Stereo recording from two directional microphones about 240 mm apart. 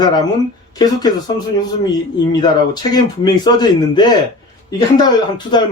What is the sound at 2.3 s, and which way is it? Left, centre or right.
Speech, centre.